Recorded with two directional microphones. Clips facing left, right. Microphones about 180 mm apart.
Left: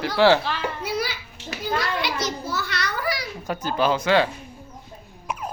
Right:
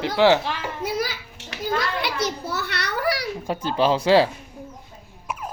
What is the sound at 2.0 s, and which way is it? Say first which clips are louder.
Children playing: right 1 dB; 60° right (ahead or behind).